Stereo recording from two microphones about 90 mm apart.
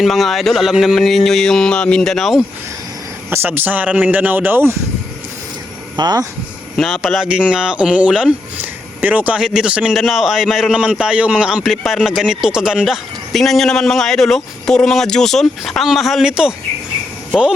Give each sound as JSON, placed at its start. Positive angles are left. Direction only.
{"t": 0.0, "sound": "a man's voice", "side_deg": 0}
{"t": 3.2, "sound": "speech", "side_deg": -25}
{"t": 6.0, "sound": "speech", "side_deg": -50}
{"t": 6.7, "sound": "a man's voice", "side_deg": -5}